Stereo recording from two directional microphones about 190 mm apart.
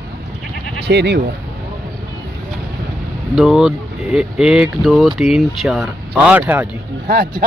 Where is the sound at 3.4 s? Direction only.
Centre (ahead or behind).